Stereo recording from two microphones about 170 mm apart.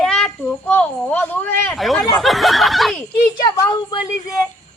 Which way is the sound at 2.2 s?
Centre (ahead or behind).